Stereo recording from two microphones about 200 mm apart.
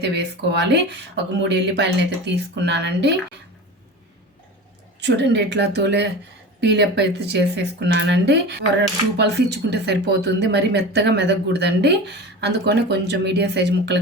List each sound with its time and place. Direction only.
0.0 s speech: 55° right (ahead or behind)
4.9 s speech: 60° right (ahead or behind)